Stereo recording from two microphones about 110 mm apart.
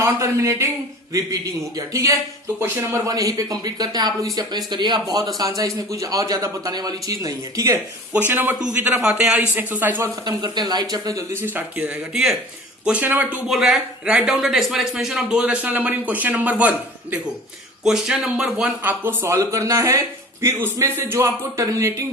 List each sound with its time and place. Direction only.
0.0 s speech: 25° right (ahead or behind)
1.9 s speech: 30° right (ahead or behind)
3.1 s speech: 35° right (ahead or behind)
8.3 s speech: 20° right (ahead or behind)
10.0 s speech: 40° right (ahead or behind)
11.3 s speech: 15° right (ahead or behind)
12.1 s speech: 5° right (ahead or behind); by 22.0 s 25° right (ahead or behind)